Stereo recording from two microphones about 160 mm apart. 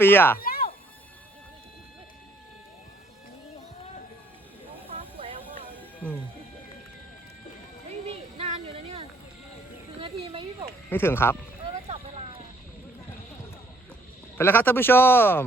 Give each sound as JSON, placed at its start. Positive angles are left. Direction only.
{"t": 0.0, "sound": "speech", "side_deg": 15}
{"t": 0.3, "sound": "a sound", "side_deg": 65}
{"t": 4.9, "sound": "vehicle", "side_deg": -35}
{"t": 7.9, "sound": "a sound", "side_deg": -40}
{"t": 10.8, "sound": "speech", "side_deg": 15}
{"t": 11.6, "sound": "vehicle", "side_deg": -40}
{"t": 14.3, "sound": "speech", "side_deg": 15}